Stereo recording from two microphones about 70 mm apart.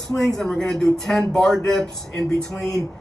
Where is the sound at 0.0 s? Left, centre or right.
Centre.